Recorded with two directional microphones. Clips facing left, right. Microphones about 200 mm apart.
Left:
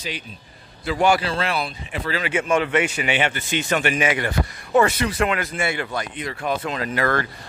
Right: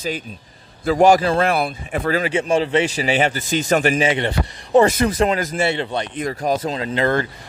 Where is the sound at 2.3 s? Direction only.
30° right (ahead or behind).